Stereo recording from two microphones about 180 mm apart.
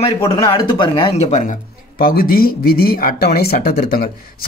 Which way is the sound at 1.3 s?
45° left (ahead or behind).